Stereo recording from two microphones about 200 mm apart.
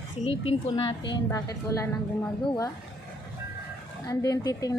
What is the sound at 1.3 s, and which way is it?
Speech, 15° left (ahead or behind).